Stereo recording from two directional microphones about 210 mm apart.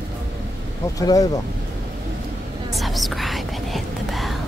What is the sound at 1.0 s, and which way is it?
Speech, 15° left (ahead or behind).